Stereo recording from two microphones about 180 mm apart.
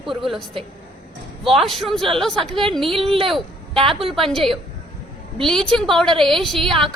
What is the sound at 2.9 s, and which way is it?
Speech, 30° right (ahead or behind).